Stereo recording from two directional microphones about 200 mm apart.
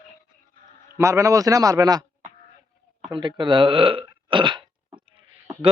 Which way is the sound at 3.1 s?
25° right (ahead or behind).